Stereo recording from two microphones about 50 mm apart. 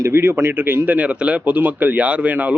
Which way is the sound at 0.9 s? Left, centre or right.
Right.